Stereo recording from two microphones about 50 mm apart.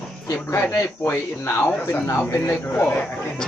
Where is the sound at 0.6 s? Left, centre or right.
Left.